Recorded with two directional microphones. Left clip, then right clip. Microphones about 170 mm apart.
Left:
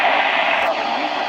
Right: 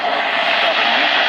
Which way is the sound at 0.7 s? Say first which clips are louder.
Right 6 dB; 10° right (ahead or behind).